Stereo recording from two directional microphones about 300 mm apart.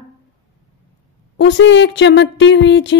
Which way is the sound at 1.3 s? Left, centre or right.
Left.